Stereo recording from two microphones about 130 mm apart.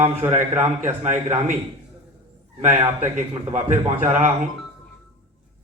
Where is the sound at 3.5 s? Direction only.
75° right (ahead or behind).